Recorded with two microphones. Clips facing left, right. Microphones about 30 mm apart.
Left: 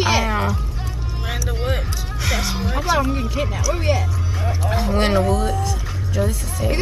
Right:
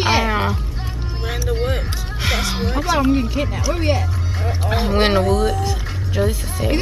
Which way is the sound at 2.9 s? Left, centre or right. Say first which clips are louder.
Right 4 dB; right.